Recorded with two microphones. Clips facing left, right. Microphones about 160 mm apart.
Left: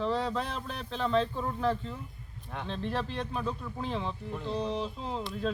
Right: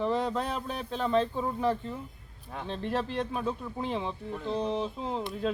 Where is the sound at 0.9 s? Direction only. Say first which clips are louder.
Right 1 dB; 10° right (ahead or behind).